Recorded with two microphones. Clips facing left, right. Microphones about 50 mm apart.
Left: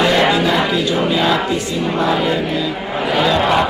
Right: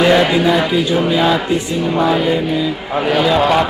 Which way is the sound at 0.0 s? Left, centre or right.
Centre.